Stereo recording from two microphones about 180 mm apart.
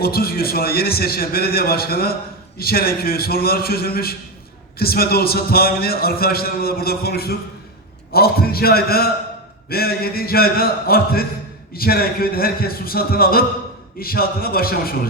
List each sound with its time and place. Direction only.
0.0 s a man's voice: 55° left (ahead or behind)